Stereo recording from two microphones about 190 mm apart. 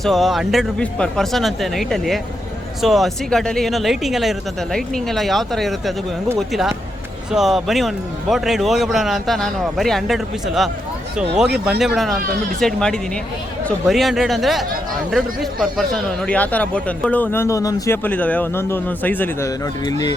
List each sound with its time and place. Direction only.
0.0 s a man's voice: centre (ahead or behind)
19.8 s speech: 20° left (ahead or behind)